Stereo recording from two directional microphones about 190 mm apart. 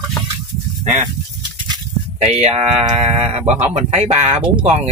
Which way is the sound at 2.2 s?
35° right (ahead or behind).